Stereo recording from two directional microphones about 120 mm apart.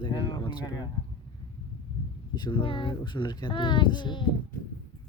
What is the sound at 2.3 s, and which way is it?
Speech, 40° left (ahead or behind).